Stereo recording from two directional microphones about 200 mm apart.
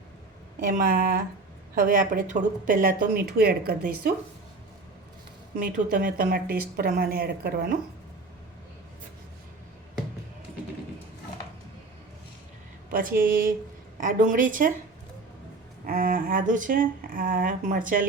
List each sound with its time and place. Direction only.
0.6 s speech: 45° right (ahead or behind)
5.5 s speech: 45° right (ahead or behind)
12.9 s a woman's voice: 45° right (ahead or behind)
15.9 s speech: 45° right (ahead or behind)